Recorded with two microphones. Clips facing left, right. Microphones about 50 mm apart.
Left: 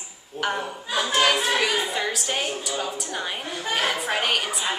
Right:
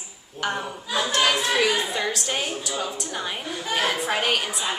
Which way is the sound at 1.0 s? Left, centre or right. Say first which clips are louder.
Left 1 dB; centre.